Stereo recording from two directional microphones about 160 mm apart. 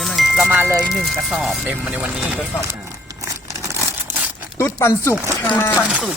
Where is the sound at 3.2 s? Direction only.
20° right (ahead or behind).